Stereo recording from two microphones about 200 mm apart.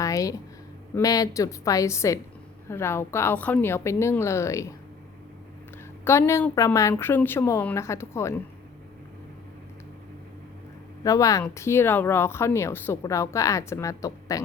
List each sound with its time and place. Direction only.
0.0 s a sound: 15° left (ahead or behind)
0.9 s speech: 15° left (ahead or behind)
6.1 s speech: 15° left (ahead or behind)
11.0 s speech: 15° left (ahead or behind)